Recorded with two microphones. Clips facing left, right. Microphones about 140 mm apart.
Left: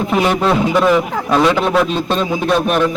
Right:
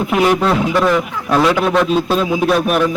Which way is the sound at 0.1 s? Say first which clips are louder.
Right 1 dB; centre (ahead or behind).